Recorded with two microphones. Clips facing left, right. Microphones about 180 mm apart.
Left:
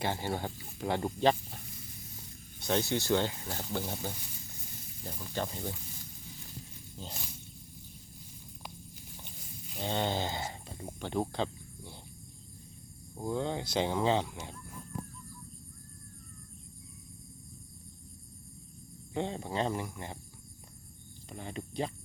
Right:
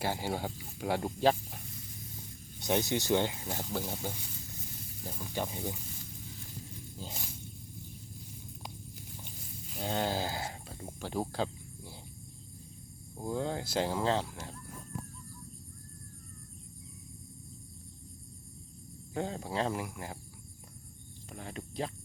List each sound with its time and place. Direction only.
0.0 s speech: 10° right (ahead or behind)
2.6 s speech: 15° right (ahead or behind)
3.7 s speech: centre (ahead or behind)
9.7 s speech: 5° right (ahead or behind)
11.0 s cricket: 5° right (ahead or behind)
13.2 s speech: 5° right (ahead or behind)
19.1 s speech: centre (ahead or behind)
21.3 s speech: centre (ahead or behind)